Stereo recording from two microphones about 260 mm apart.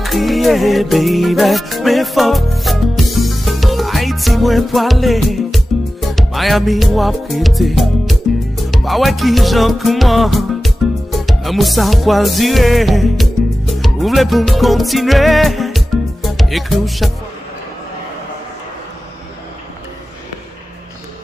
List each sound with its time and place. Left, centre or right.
0.0 s music: centre